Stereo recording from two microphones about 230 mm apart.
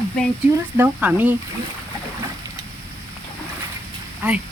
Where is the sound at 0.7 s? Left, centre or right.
Centre.